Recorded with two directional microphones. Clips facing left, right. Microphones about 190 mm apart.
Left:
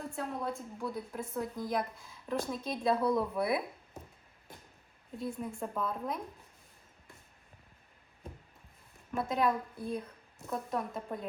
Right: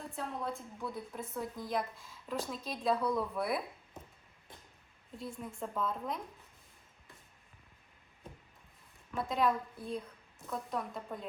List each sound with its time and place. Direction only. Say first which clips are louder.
0.4 s a woman's voice: left 3 dB; centre (ahead or behind)
2.9 s speech: left 3 dB; 25° left (ahead or behind)
3.2 s a woman's voice: left 3 dB; centre (ahead or behind)
5.1 s a woman's voice: left 5 dB; centre (ahead or behind)
9.1 s a woman's voice: left 1 dB; centre (ahead or behind)